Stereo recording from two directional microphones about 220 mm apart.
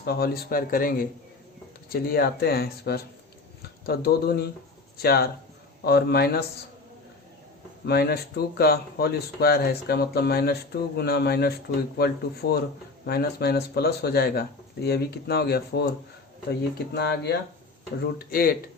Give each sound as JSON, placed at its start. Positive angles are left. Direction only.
{"t": 0.0, "sound": "speech", "side_deg": 45}
{"t": 7.9, "sound": "speech", "side_deg": 45}